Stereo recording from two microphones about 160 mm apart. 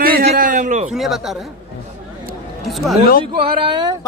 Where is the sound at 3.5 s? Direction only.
30° right (ahead or behind).